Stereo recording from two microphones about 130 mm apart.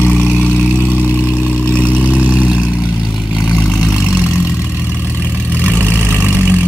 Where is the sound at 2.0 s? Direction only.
15° right (ahead or behind).